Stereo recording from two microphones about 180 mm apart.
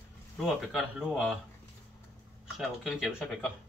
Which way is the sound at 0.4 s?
5° right (ahead or behind).